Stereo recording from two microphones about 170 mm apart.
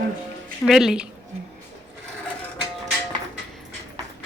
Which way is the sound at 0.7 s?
Centre (ahead or behind).